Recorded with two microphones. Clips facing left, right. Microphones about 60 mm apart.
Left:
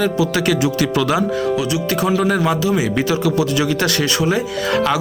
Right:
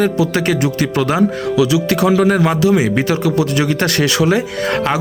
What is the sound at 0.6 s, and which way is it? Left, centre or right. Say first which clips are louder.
Speech: right 1 dB; right.